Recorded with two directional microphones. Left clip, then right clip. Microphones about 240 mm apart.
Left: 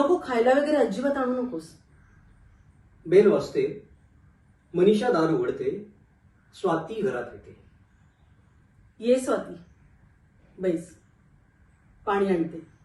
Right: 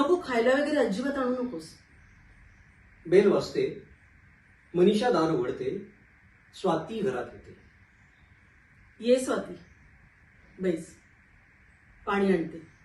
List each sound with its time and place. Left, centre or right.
0.0 s a woman's voice: centre
3.1 s a woman's voice: centre
4.9 s a woman's voice: centre
9.0 s a woman's voice: centre
10.6 s a woman's voice: centre
12.0 s a woman's voice: centre